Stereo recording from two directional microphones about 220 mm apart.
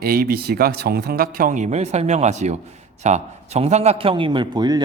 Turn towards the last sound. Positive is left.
turn(degrees=-20)  # may be behind; listen again after turning